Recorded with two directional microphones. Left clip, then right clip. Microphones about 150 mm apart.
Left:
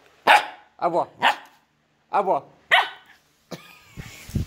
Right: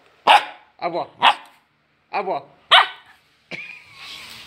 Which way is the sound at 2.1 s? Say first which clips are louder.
Left 3 dB; 30° left (ahead or behind).